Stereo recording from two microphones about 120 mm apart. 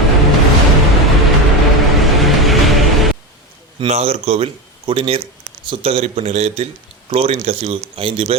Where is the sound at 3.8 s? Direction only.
55° right (ahead or behind).